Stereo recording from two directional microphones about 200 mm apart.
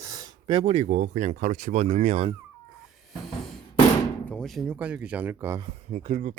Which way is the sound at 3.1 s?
Centre (ahead or behind).